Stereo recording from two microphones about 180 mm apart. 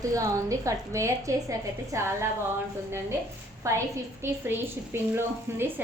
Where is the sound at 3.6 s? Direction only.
15° right (ahead or behind).